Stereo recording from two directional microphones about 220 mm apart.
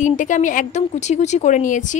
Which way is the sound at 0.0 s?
35° left (ahead or behind).